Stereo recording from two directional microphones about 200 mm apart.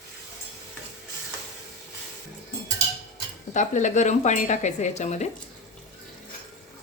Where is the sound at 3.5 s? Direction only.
40° left (ahead or behind).